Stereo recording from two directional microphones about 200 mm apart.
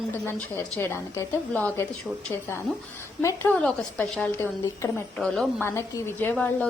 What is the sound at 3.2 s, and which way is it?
A woman's voice, 10° left (ahead or behind).